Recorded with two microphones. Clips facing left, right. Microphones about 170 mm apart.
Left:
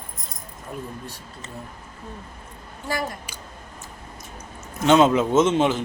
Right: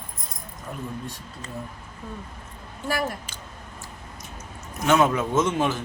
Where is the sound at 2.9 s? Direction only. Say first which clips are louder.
Right 1 dB; 15° left (ahead or behind).